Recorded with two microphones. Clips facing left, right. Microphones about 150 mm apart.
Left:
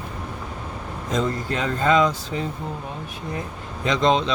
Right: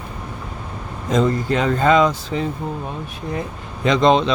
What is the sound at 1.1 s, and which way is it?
Speech, 75° right (ahead or behind).